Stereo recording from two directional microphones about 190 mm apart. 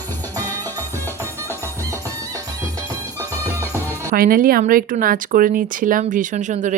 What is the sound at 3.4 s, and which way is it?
Music, 15° right (ahead or behind).